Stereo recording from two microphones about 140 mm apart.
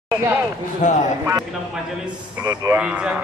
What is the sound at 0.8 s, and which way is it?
Speech, 65° left (ahead or behind).